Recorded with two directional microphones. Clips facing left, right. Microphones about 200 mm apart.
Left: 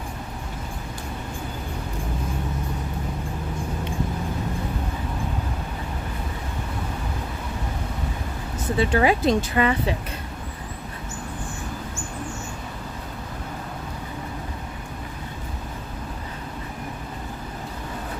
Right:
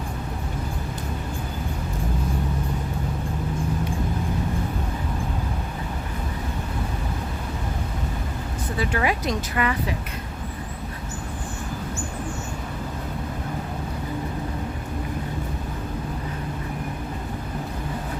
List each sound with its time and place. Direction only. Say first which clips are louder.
8.8 s speech: left 5 dB; 30° left (ahead or behind)